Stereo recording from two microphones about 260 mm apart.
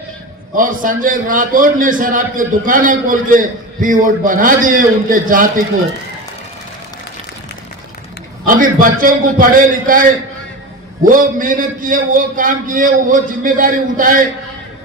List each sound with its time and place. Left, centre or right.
0.5 s a man's voice: right
8.4 s a man's voice: right
11.1 s a man's voice: right